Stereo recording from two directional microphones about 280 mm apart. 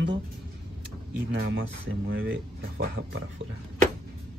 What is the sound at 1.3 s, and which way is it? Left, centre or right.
Speech, right.